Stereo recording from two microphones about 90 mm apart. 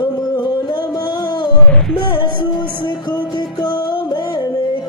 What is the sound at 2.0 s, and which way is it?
Music, 55° left (ahead or behind).